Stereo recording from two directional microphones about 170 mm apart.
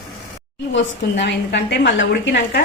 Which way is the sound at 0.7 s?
90° left.